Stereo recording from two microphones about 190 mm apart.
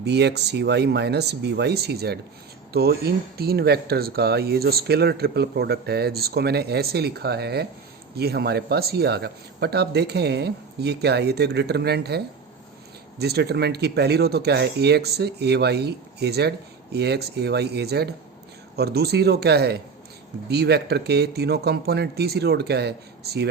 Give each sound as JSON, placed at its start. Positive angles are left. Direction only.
{"t": 0.0, "sound": "speech", "side_deg": -60}